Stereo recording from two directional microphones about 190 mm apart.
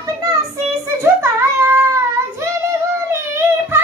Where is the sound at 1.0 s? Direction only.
10° right (ahead or behind).